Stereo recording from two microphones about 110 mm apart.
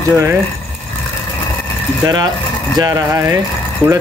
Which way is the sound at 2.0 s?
35° right (ahead or behind).